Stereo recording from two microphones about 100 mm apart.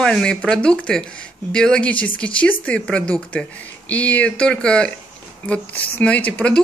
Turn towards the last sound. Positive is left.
turn(degrees=15)  # may be behind; listen again after turning